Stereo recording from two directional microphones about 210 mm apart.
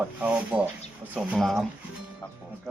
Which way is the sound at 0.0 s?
5° right (ahead or behind).